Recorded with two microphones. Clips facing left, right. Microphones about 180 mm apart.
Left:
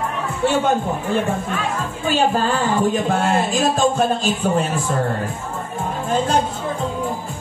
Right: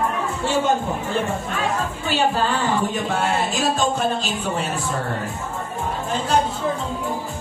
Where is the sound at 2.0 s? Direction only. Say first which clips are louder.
Left 3 dB; 45° left (ahead or behind).